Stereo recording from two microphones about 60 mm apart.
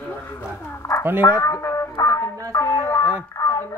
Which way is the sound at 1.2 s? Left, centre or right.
Left.